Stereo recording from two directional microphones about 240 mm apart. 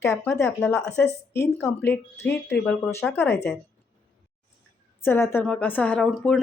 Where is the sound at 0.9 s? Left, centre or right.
Left.